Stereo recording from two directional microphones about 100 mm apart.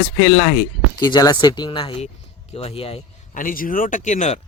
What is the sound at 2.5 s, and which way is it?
Speech, 80° left.